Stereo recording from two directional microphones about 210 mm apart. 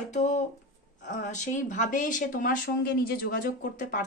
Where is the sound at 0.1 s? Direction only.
35° left (ahead or behind).